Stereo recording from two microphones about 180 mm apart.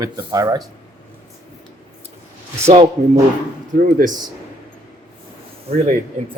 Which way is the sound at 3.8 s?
45° right (ahead or behind).